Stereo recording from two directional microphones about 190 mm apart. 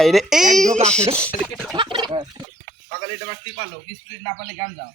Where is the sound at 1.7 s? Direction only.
25° right (ahead or behind).